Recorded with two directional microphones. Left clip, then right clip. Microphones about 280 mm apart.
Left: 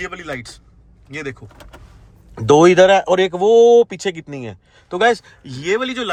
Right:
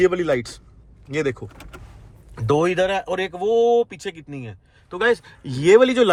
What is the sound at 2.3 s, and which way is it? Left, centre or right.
Speech, left.